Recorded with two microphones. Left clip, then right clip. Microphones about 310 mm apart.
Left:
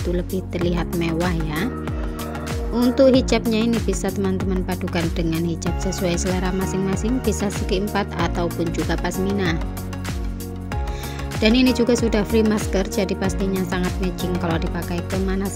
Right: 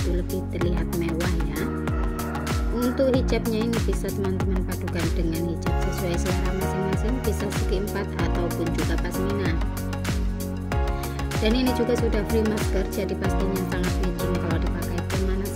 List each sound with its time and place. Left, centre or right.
3.0 s speech: left
5.9 s speech: left
7.3 s speech: left
11.4 s speech: left
13.2 s music: centre